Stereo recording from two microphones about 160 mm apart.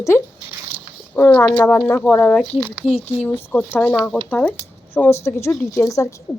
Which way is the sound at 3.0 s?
10° left (ahead or behind).